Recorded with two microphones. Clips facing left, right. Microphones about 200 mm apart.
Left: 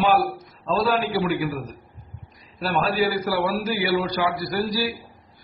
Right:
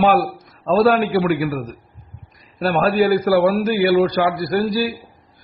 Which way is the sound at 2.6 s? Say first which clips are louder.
Right 6 dB; 55° right (ahead or behind).